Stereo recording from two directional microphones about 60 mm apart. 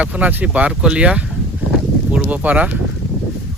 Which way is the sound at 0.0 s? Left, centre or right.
Right.